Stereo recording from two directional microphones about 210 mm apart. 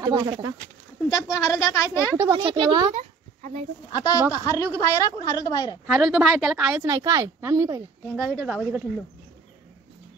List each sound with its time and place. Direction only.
0.0 s speech: 20° right (ahead or behind)
1.3 s a woman's voice: 15° left (ahead or behind)
2.1 s speech: 15° right (ahead or behind)
2.9 s a sound: 30° right (ahead or behind)
3.9 s a woman's voice: 15° left (ahead or behind)
5.9 s a woman's voice: centre (ahead or behind)